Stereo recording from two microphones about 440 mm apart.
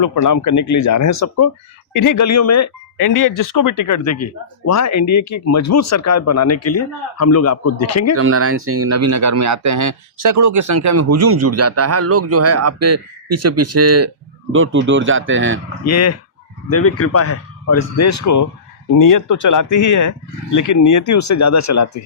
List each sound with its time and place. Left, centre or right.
0.0 s speech: left
8.1 s speech: right
15.9 s speech: left